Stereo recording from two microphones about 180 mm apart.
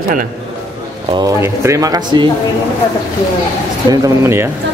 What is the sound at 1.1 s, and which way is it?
Speech, 15° right (ahead or behind).